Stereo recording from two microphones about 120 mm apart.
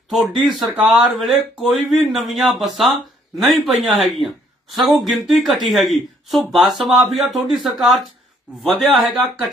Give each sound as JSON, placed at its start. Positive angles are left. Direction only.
{"t": 0.1, "sound": "speech", "side_deg": 0}